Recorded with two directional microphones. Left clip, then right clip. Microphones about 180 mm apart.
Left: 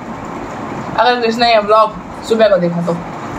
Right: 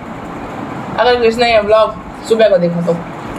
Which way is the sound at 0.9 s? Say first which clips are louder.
Right 2 dB; 25° right (ahead or behind).